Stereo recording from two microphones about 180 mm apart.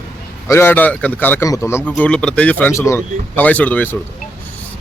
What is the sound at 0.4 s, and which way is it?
A man's voice, 15° left (ahead or behind).